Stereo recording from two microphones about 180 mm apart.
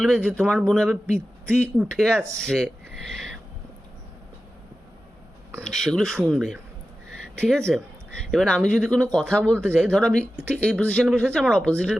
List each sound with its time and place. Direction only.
0.0 s speech: centre (ahead or behind)
3.1 s a sound: centre (ahead or behind)
5.6 s speech: 5° left (ahead or behind)
9.6 s speech: 10° right (ahead or behind)
9.9 s speech: 5° left (ahead or behind)